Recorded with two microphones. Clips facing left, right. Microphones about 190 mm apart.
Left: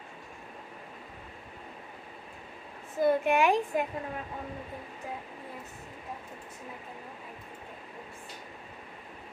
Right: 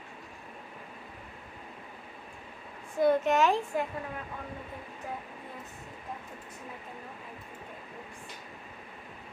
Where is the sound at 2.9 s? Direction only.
5° left (ahead or behind).